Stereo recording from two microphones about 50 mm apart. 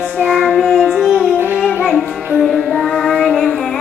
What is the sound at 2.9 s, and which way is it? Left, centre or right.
Child singing, centre.